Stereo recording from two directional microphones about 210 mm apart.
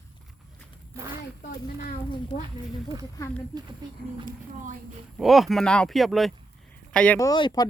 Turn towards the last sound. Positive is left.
turn(degrees=20)  # may be behind; listen again after turning